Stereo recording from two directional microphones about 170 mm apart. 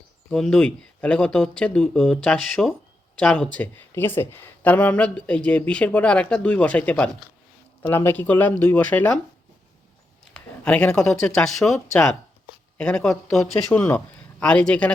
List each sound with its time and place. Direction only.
0.3 s speech: 5° left (ahead or behind)
10.3 s speech: 5° left (ahead or behind)